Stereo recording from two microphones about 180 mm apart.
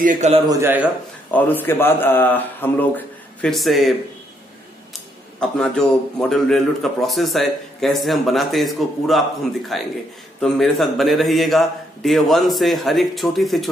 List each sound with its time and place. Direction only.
0.0 s a man's voice: 45° right (ahead or behind)
0.5 s a man's voice: 15° right (ahead or behind)
1.3 s a man's voice: 10° left (ahead or behind)
5.4 s a man's voice: 5° left (ahead or behind)